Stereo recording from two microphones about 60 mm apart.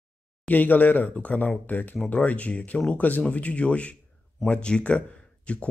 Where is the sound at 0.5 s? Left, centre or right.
Left.